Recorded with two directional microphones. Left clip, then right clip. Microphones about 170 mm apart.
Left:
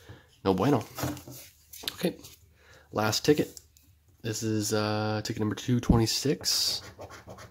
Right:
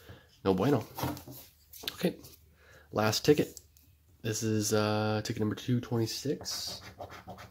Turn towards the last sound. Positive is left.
turn(degrees=40)  # may be behind; listen again after turning